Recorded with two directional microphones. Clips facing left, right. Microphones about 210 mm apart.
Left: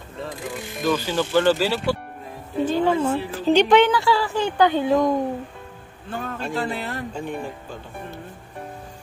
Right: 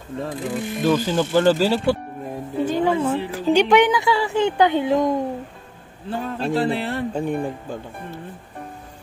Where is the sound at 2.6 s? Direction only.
15° right (ahead or behind).